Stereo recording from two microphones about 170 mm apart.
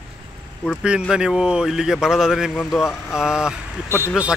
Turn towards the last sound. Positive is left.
turn(degrees=-5)  # may be behind; listen again after turning